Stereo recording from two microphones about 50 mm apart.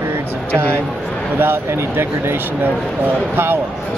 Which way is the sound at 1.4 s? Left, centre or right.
Right.